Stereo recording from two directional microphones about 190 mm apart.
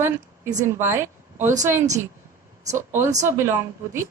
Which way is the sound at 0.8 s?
15° right (ahead or behind).